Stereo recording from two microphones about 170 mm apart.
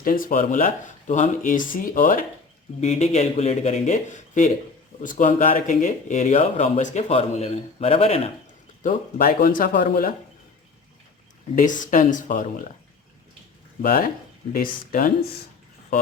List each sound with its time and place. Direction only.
0.0 s speech: 55° left (ahead or behind)
2.8 s speech: 40° left (ahead or behind)
8.8 s speech: 55° left (ahead or behind)
11.5 s speech: 50° left (ahead or behind)
13.8 s speech: 55° left (ahead or behind)